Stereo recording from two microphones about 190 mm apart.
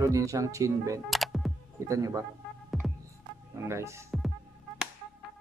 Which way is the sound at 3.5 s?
15° right (ahead or behind).